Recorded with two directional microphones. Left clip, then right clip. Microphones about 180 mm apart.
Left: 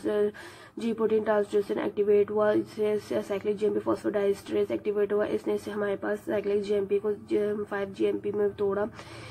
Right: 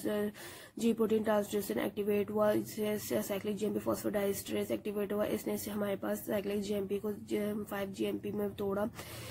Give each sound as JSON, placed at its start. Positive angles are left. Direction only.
{"t": 0.0, "sound": "speech", "side_deg": -35}